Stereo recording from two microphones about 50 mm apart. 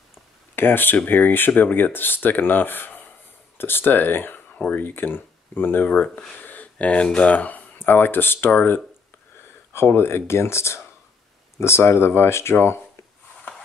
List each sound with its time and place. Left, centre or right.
0.6 s speech: left
9.7 s speech: left